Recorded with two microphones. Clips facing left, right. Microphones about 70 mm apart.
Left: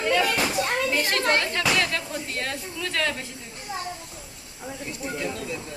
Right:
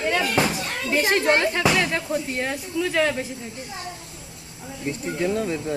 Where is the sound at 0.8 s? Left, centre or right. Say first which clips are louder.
Right 4 dB; right.